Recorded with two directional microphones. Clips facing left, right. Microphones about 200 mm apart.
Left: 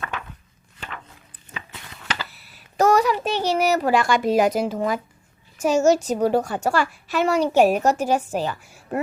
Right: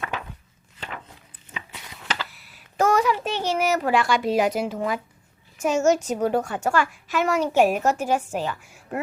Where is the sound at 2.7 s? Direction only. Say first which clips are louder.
Left 3 dB; 40° left (ahead or behind).